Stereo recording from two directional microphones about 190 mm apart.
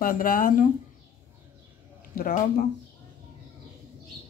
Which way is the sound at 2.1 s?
45° left (ahead or behind).